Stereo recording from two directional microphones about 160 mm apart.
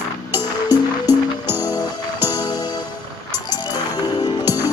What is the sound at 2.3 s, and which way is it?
Music, 25° left (ahead or behind).